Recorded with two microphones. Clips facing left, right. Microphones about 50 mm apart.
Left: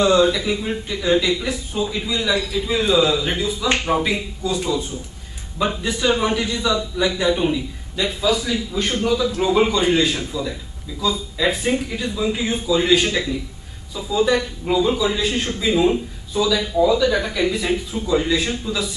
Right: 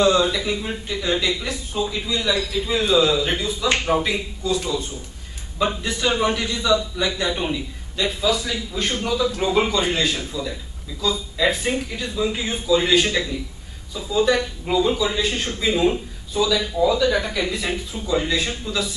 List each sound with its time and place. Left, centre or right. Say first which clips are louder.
0.0 s a man's voice: left 2 dB; centre
2.1 s speech: left 1 dB; centre
2.5 s a man's voice: even; centre